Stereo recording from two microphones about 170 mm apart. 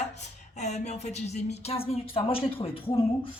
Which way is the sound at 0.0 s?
40° left (ahead or behind).